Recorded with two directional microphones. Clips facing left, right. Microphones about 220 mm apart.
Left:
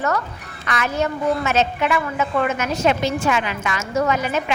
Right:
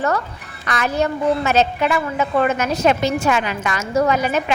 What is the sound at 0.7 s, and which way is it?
A woman's voice, 35° right (ahead or behind).